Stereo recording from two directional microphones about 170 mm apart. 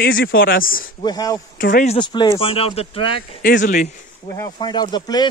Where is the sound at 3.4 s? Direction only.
55° left (ahead or behind).